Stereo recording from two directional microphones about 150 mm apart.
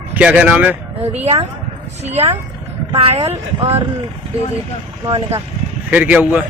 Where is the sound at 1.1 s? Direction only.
45° right (ahead or behind).